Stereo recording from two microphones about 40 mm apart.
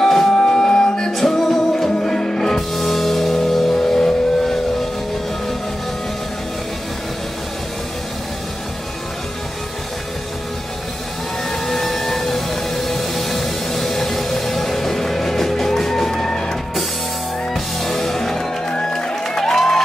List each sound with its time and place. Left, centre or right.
0.0 s music: centre
1.1 s music: centre
11.6 s music: centre
17.8 s music: centre